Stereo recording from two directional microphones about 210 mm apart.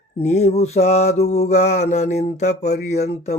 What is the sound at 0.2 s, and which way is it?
Mantra, 30° left (ahead or behind).